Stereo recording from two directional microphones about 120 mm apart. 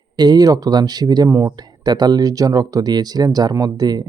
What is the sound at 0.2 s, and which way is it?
Speech, 35° right (ahead or behind).